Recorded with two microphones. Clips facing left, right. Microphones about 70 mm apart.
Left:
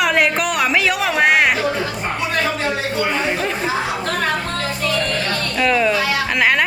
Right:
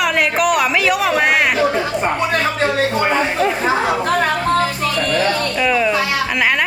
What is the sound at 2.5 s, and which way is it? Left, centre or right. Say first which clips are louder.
Speech: right 4 dB; right.